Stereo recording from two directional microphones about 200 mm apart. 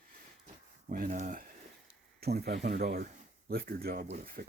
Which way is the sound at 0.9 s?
40° right (ahead or behind).